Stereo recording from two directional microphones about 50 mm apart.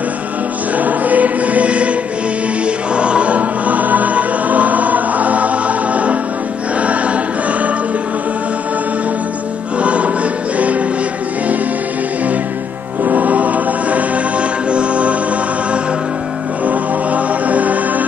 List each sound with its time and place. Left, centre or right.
0.7 s choir: right
2.6 s music: right
6.8 s choir: right
9.8 s music: right
13.0 s music: right
16.6 s music: right